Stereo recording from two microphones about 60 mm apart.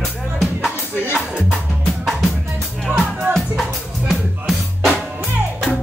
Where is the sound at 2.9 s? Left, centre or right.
Right.